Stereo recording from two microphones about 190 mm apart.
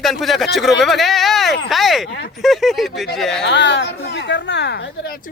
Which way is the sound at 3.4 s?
65° left (ahead or behind).